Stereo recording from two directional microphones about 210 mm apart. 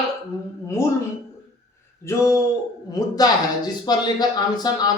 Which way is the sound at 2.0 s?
15° left (ahead or behind).